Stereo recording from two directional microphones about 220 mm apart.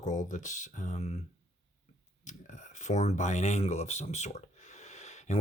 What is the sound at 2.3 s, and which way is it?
Speech, 35° left (ahead or behind).